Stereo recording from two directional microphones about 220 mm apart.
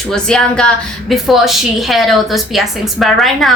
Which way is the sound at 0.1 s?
5° left (ahead or behind).